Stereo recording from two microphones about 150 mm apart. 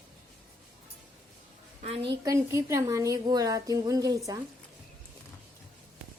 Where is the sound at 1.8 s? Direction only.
40° right (ahead or behind).